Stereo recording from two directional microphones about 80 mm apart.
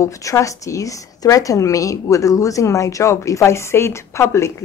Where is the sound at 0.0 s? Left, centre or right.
Left.